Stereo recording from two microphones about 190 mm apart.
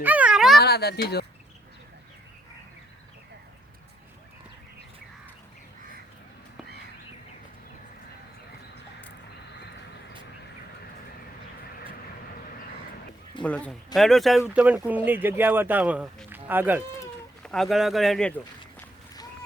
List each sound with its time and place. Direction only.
0.0 s a sound: 10° right (ahead or behind)
0.6 s speech: 55° left (ahead or behind)
13.4 s speech: 5° left (ahead or behind); by 16.8 s 10° right (ahead or behind)
17.4 s speech: 5° left (ahead or behind)